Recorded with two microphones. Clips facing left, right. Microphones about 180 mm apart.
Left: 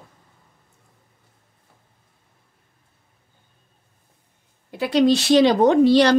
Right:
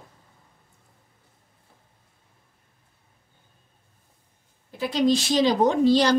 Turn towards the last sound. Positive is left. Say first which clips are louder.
# left 5 dB
turn(degrees=65)  # may be behind; listen again after turning